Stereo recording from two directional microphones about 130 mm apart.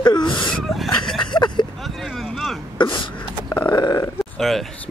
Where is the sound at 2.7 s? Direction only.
40° left (ahead or behind).